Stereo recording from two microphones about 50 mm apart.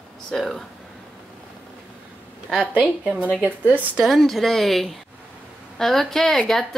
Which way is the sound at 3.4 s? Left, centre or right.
Right.